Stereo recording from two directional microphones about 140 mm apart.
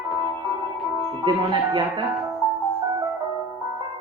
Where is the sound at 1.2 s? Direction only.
35° right (ahead or behind).